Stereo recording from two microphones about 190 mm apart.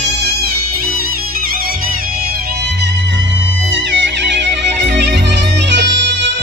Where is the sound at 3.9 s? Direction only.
70° right (ahead or behind).